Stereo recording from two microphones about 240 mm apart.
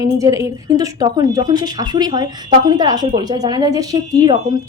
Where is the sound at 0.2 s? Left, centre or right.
Centre.